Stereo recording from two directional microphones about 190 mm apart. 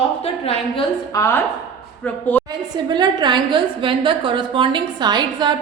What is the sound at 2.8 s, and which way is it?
A woman's voice, 20° right (ahead or behind).